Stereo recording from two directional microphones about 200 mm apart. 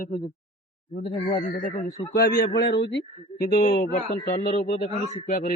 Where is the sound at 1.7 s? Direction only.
35° left (ahead or behind).